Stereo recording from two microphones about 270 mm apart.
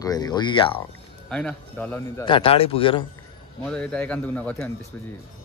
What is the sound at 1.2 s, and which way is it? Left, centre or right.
Speech, centre.